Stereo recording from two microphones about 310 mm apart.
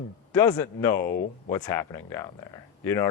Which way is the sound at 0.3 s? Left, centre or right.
Centre.